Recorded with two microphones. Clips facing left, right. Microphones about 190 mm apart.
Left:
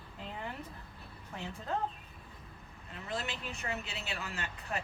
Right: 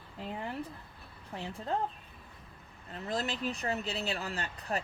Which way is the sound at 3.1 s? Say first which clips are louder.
Right 5 dB; 35° right (ahead or behind).